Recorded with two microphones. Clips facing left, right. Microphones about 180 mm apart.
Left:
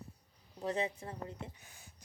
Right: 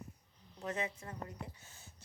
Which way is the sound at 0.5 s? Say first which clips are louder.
Left 4 dB; 35° left (ahead or behind).